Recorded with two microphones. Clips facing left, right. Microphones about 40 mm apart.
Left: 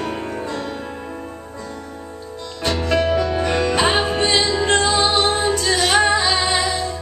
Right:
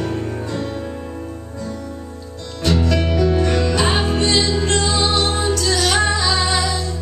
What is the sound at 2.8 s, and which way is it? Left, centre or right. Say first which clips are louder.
Music: left 4 dB; left.